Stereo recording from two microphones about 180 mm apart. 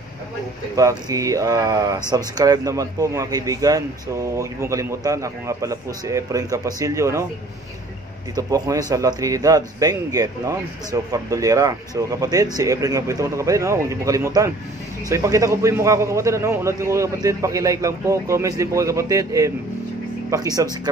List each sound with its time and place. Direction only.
0.7 s speech: 20° right (ahead or behind)
8.4 s a man's voice: 20° right (ahead or behind)